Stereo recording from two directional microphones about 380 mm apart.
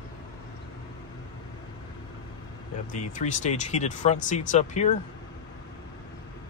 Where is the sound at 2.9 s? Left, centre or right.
Centre.